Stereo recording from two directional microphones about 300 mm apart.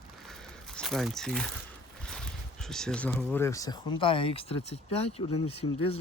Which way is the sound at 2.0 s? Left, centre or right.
Centre.